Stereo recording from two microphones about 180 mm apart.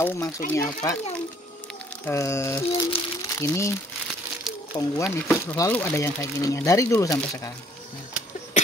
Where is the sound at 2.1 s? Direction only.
15° left (ahead or behind).